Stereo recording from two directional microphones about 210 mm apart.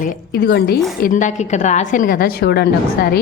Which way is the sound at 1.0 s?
40° left (ahead or behind).